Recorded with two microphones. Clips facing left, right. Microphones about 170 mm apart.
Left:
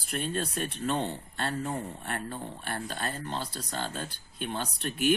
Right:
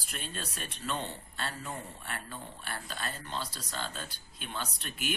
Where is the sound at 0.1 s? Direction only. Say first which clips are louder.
Left 10 dB; 55° left (ahead or behind).